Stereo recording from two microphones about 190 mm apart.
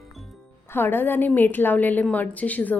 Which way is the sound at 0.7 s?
10° left (ahead or behind).